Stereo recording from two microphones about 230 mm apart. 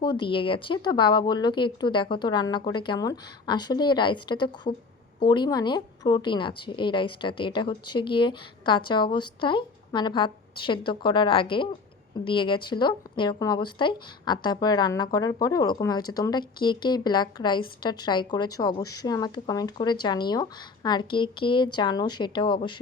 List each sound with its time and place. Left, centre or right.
0.2 s a woman's voice: left